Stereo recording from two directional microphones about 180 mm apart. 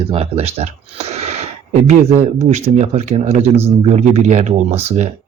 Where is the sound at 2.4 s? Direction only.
40° right (ahead or behind).